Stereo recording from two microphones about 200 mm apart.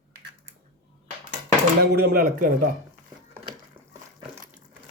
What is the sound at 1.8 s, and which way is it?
Speech, 50° right (ahead or behind).